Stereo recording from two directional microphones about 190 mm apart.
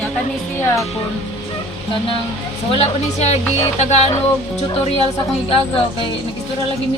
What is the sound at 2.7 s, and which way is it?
Speech, 35° left (ahead or behind).